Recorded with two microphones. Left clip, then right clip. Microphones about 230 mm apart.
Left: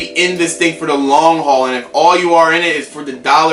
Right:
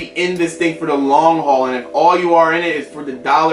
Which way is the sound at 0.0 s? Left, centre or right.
Centre.